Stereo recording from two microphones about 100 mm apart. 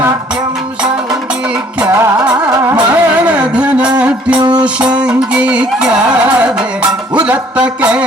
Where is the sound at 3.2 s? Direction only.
15° right (ahead or behind).